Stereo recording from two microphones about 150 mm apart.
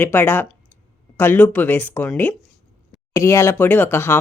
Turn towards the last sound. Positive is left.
turn(degrees=15)  # may be behind; listen again after turning